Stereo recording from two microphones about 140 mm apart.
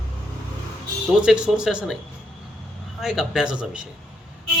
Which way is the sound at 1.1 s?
5° right (ahead or behind).